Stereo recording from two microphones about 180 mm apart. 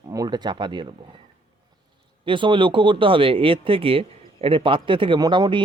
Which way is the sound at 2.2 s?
25° right (ahead or behind).